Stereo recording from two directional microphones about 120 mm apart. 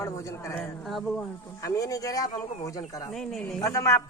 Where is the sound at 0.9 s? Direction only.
Centre (ahead or behind).